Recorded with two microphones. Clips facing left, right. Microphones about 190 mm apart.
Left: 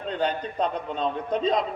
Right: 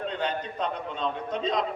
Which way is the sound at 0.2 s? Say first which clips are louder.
Left 8 dB; 35° left (ahead or behind).